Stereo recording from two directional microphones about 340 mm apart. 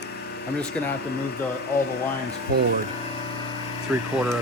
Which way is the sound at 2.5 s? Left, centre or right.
Right.